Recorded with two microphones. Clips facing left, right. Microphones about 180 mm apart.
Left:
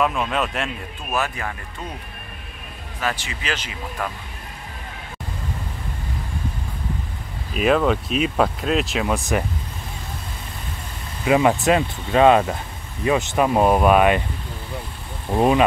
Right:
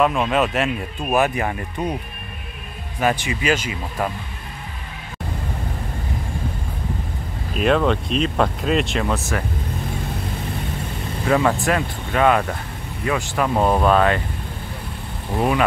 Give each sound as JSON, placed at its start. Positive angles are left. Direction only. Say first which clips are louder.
{"t": 0.0, "sound": "speech", "louder": "right 4 dB", "side_deg": 0}
{"t": 1.1, "sound": "speech", "louder": "right 6 dB", "side_deg": -15}
{"t": 3.0, "sound": "speech", "louder": "right 7 dB", "side_deg": -15}
{"t": 7.5, "sound": "speech", "louder": "even", "side_deg": 5}
{"t": 9.3, "sound": "speech", "louder": "left 3 dB", "side_deg": 20}
{"t": 11.2, "sound": "speech", "louder": "left 2 dB", "side_deg": 15}
{"t": 15.3, "sound": "speech", "louder": "left 3 dB", "side_deg": 20}